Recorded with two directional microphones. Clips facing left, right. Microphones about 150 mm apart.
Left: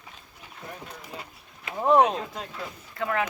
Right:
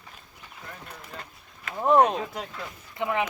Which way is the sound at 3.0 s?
20° right (ahead or behind).